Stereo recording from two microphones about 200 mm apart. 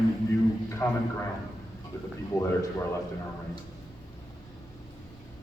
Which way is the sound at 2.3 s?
20° left (ahead or behind).